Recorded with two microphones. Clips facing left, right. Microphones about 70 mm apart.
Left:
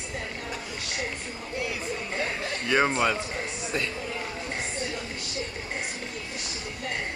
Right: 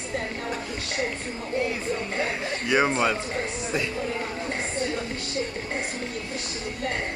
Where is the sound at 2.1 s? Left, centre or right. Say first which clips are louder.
Right 2 dB; right.